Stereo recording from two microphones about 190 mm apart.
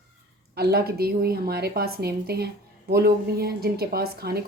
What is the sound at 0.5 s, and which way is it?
Speech, 55° right (ahead or behind).